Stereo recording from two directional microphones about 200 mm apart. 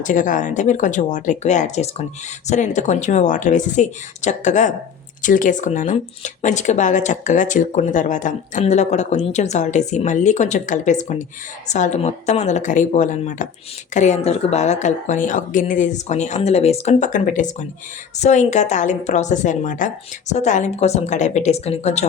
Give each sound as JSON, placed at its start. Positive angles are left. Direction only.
{"t": 0.0, "sound": "speech", "side_deg": 40}